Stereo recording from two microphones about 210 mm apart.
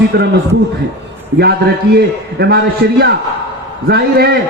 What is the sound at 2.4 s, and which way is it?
Speech, 50° right (ahead or behind).